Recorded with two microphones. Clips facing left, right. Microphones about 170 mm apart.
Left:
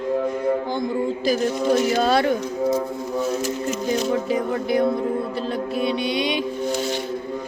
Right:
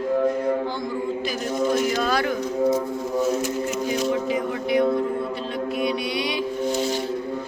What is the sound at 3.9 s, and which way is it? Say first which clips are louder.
Music: left 3 dB; 40° left (ahead or behind).